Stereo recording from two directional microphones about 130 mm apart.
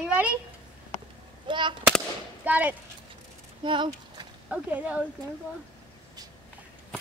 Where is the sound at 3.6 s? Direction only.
35° right (ahead or behind).